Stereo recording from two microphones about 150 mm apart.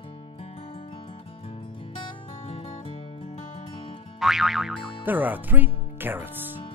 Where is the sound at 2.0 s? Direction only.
35° left (ahead or behind).